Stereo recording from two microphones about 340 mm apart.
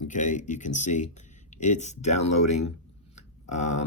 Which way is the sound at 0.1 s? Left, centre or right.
Left.